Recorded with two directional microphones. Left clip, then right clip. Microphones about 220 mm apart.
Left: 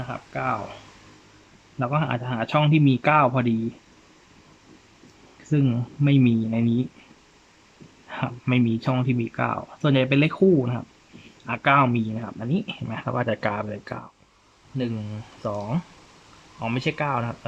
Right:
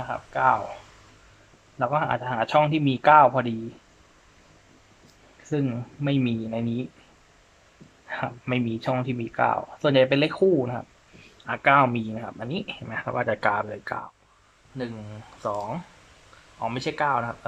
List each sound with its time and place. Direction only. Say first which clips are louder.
0.0 s a man's voice: right 6 dB; 5° left (ahead or behind)
1.8 s a man's voice: right 2 dB; 5° left (ahead or behind)
5.5 s speech: left 3 dB; 10° left (ahead or behind)
8.1 s speech: left 2 dB; 5° left (ahead or behind)